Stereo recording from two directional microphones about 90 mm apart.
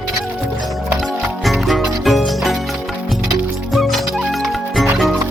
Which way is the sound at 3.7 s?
Centre (ahead or behind).